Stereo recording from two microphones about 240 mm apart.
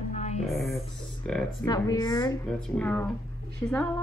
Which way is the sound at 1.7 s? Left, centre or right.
Centre.